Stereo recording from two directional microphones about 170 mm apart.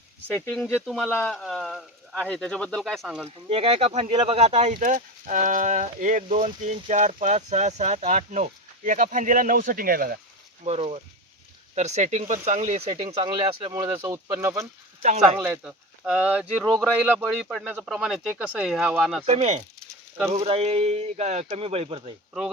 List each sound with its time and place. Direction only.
0.3 s speech: 5° left (ahead or behind)
0.7 s speech: 5° right (ahead or behind)
3.2 s speech: 35° right (ahead or behind); by 10.2 s 60° right (ahead or behind)
10.6 s speech: 35° right (ahead or behind)
13.7 s speech: 15° right (ahead or behind)
16.6 s speech: 5° left (ahead or behind)
19.2 s speech: 40° right (ahead or behind)